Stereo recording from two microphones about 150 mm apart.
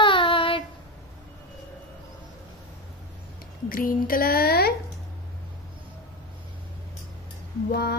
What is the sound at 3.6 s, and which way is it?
Speech, 70° left (ahead or behind).